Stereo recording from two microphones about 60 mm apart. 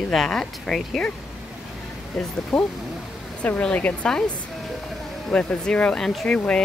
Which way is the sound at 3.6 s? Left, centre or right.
Left.